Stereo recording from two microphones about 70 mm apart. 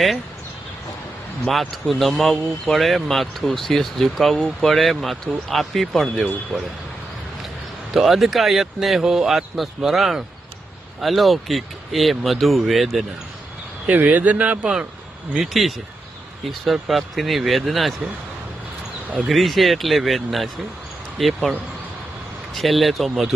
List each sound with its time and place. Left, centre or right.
1.5 s speech: centre
7.9 s speech: centre
13.8 s speech: right
15.3 s speech: centre
19.3 s speech: centre
22.5 s speech: centre